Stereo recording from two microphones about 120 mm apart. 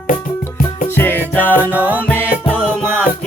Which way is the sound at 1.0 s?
15° left (ahead or behind).